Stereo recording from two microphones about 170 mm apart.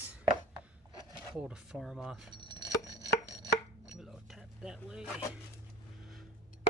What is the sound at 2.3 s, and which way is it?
Chopping, 25° right (ahead or behind).